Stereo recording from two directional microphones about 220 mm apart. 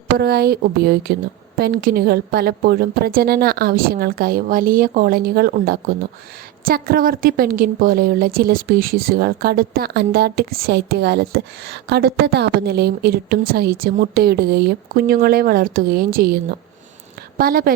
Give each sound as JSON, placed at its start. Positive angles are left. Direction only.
{"t": 0.2, "sound": "a woman's voice", "side_deg": -45}